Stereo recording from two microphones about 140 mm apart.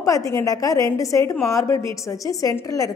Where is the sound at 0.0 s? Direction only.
25° left (ahead or behind).